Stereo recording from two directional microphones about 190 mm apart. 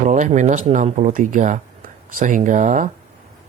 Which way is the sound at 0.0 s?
40° right (ahead or behind).